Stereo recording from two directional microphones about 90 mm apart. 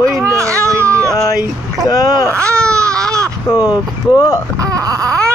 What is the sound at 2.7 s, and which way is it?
Baby cry, 40° right (ahead or behind).